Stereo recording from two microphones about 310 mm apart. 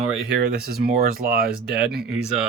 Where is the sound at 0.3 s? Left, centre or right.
Right.